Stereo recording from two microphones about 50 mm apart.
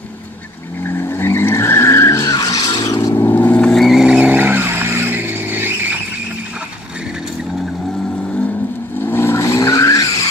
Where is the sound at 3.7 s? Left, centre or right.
Centre.